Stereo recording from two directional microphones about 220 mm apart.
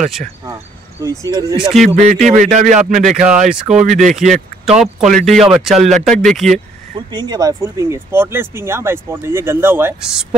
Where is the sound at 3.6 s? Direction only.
35° right (ahead or behind).